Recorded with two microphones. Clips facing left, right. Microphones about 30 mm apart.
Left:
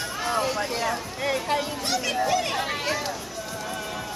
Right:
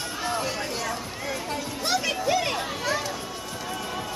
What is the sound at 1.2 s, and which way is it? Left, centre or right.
Bow-wow, left.